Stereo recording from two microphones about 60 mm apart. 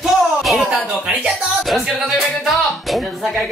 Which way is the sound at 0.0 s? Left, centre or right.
Centre.